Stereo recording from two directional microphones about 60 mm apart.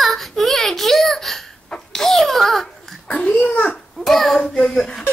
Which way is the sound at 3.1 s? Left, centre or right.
Centre.